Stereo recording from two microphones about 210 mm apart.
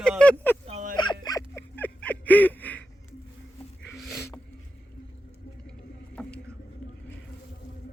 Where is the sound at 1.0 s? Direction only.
20° left (ahead or behind).